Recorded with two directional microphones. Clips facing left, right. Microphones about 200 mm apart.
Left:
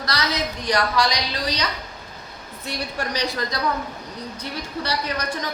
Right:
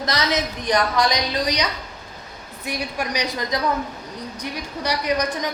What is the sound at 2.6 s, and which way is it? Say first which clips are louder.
A woman's voice: right 2 dB; 15° right (ahead or behind).